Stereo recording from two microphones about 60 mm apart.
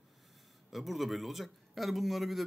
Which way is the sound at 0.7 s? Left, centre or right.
Centre.